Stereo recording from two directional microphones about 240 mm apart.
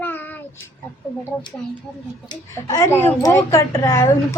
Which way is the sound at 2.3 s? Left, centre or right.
Centre.